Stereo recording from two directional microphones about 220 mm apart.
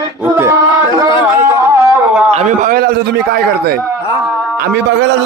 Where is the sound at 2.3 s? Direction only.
35° right (ahead or behind).